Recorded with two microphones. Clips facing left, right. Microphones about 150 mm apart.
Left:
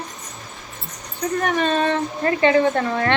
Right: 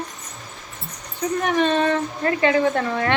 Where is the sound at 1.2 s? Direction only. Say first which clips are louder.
Right 1 dB; 5° right (ahead or behind).